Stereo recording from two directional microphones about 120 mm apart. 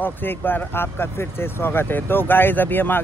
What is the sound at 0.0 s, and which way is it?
Speech, 15° left (ahead or behind).